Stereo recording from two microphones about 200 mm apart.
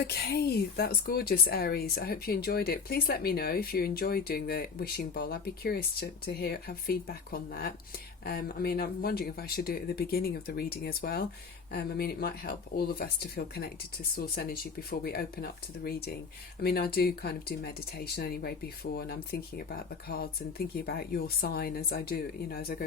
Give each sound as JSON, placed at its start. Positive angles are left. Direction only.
{"t": 0.0, "sound": "speech", "side_deg": 55}